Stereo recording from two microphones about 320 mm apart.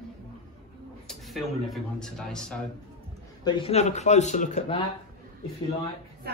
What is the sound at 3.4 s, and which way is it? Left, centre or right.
Speech, centre.